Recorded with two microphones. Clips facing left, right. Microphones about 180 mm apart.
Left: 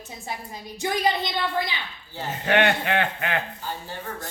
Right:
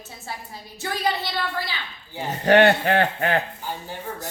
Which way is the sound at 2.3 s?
40° right (ahead or behind).